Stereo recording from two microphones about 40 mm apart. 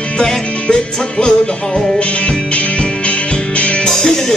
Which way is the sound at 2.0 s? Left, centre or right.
Left.